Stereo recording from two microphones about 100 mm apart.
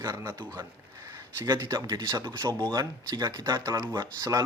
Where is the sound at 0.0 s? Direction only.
35° right (ahead or behind).